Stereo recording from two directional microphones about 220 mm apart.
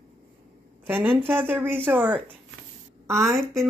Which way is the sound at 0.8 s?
10° right (ahead or behind).